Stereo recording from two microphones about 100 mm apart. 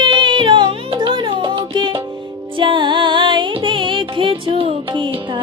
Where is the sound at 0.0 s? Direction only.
50° right (ahead or behind); by 4.7 s 65° right (ahead or behind).